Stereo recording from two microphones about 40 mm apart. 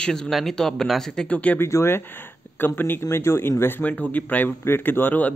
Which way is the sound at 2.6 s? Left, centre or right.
Left.